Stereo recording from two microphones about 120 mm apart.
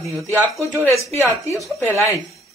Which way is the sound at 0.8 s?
25° left (ahead or behind).